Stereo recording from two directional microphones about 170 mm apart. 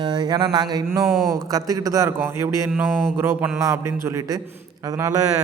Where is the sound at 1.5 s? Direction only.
20° right (ahead or behind).